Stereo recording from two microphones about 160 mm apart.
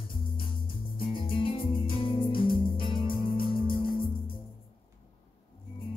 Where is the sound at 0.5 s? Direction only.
35° left (ahead or behind).